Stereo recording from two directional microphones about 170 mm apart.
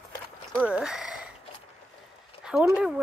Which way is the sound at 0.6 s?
5° right (ahead or behind).